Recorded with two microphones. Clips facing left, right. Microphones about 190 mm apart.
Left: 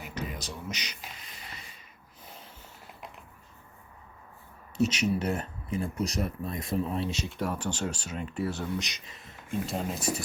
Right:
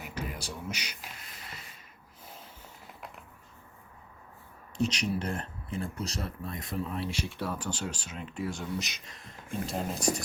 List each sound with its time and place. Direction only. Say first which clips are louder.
0.1 s music: left 1 dB; 10° right (ahead or behind)
4.8 s speech: left 3 dB; 5° left (ahead or behind)
7.6 s speech: left 3 dB; 10° right (ahead or behind)
8.1 s speech: left 4 dB; 5° left (ahead or behind)